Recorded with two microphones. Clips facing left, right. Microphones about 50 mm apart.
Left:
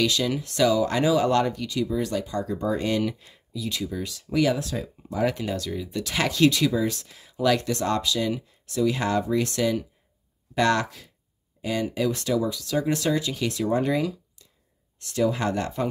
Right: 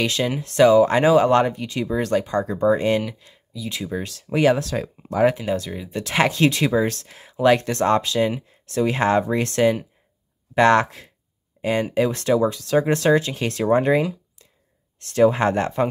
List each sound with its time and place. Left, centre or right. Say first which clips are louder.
0.0 s speech: right 2 dB; right
1.9 s speech: right 5 dB; right
2.6 s speech: right 6 dB; right
4.6 s speech: right 5 dB; right
5.3 s speech: right 4 dB; centre; by 15.9 s right